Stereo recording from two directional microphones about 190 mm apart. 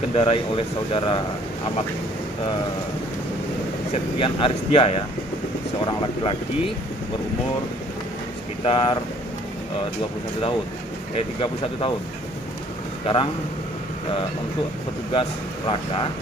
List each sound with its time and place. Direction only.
0.1 s speech: 30° left (ahead or behind)
3.9 s speech: 30° left (ahead or behind)
8.6 s speech: 30° left (ahead or behind)
11.1 s speech: 30° left (ahead or behind)
13.0 s speech: 30° left (ahead or behind)
15.1 s speech: 25° left (ahead or behind)